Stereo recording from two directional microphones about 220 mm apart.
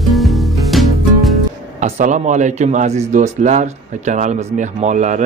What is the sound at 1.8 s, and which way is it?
A man's voice, 30° right (ahead or behind).